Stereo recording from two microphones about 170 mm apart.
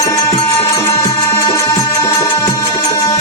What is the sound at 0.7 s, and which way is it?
Music, 15° left (ahead or behind).